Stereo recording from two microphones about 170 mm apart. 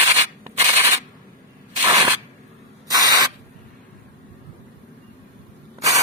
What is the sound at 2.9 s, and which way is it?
Spray, 20° right (ahead or behind).